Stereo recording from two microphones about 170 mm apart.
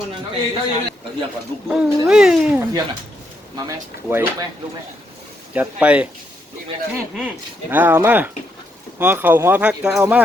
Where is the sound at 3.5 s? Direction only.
15° right (ahead or behind).